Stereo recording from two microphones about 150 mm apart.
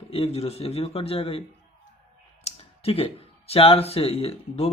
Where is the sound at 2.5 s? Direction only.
40° left (ahead or behind).